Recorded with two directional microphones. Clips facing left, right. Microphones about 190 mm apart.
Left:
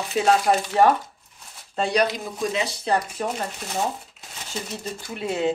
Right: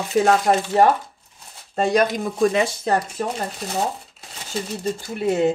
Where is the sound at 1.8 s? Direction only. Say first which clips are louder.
Right 3 dB; 45° right (ahead or behind).